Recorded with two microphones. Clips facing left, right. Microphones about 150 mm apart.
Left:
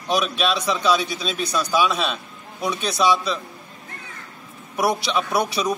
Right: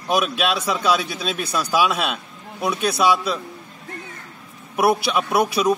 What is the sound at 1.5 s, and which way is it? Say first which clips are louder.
Speech: right 1 dB; 5° right (ahead or behind).